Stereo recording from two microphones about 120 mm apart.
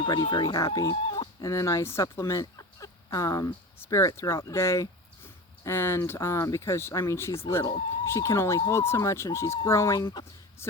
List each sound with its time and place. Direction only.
0.0 s speech: 40° left (ahead or behind)
1.0 s chicken: 45° left (ahead or behind)
1.4 s speech: 25° left (ahead or behind)